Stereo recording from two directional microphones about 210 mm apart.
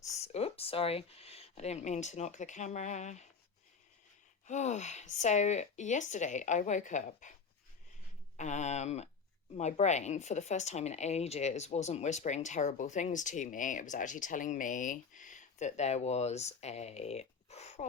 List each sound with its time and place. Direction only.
0.2 s speech: 30° left (ahead or behind)
4.4 s speech: 35° left (ahead or behind)
8.4 s speech: 35° left (ahead or behind)